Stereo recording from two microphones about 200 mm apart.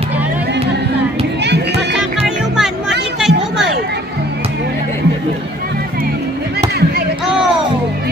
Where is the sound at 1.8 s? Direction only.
5° right (ahead or behind).